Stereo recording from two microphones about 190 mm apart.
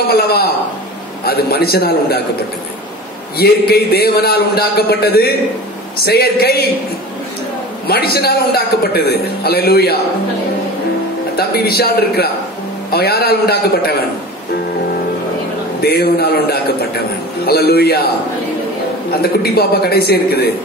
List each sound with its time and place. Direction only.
0.1 s a man's voice: 55° left (ahead or behind)
3.3 s a man's voice: 55° left (ahead or behind)
7.8 s a man's voice: 55° left (ahead or behind)
11.3 s a man's voice: 55° left (ahead or behind)
15.8 s a man's voice: 55° left (ahead or behind)
19.4 s a man's voice: 55° left (ahead or behind)